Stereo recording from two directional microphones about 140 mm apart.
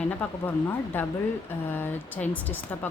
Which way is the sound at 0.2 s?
15° left (ahead or behind).